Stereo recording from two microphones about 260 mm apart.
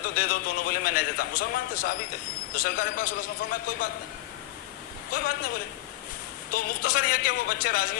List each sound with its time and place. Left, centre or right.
0.0 s a man's voice: left
5.1 s a man's voice: left
6.5 s a man's voice: left